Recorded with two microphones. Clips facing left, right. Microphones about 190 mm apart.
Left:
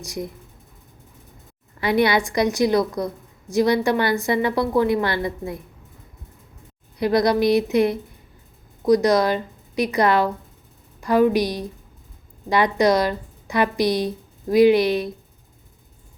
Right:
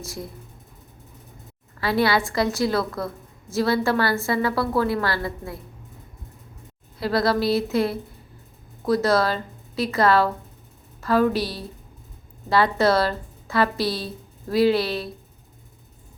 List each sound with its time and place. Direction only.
0.0 s a woman's voice: 15° left (ahead or behind)
1.8 s a woman's voice: 20° left (ahead or behind)
7.0 s a woman's voice: 20° left (ahead or behind)